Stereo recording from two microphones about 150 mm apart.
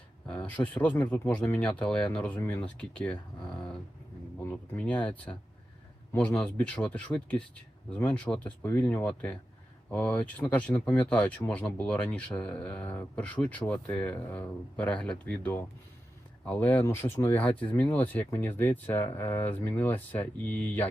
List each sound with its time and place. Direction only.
0.3 s speech: 10° left (ahead or behind)